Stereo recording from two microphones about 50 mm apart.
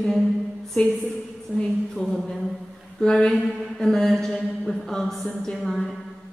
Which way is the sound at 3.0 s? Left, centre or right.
Centre.